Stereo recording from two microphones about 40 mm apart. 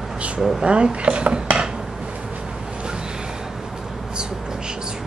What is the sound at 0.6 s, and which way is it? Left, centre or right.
Dishes, right.